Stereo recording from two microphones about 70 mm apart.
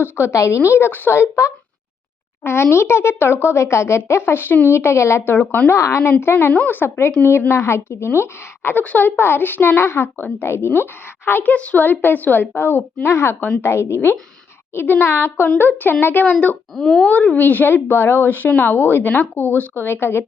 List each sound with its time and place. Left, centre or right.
0.0 s a woman's voice: left
5.7 s a woman's voice: left
8.8 s a woman's voice: left
11.5 s a woman's voice: left
16.2 s a woman's voice: centre
16.7 s speech: centre
17.1 s a woman's voice: left
17.8 s a woman's voice: left